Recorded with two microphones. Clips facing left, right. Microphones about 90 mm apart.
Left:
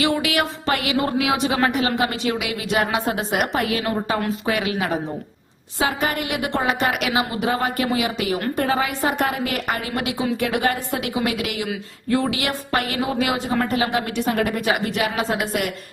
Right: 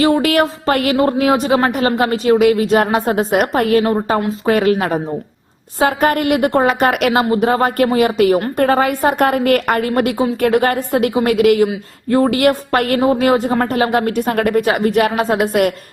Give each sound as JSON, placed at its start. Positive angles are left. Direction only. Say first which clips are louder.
{"t": 0.0, "sound": "speech", "louder": "right 8 dB", "side_deg": -40}
{"t": 0.9, "sound": "speech", "louder": "right 7 dB", "side_deg": -35}
{"t": 13.0, "sound": "speech", "louder": "right 9 dB", "side_deg": -40}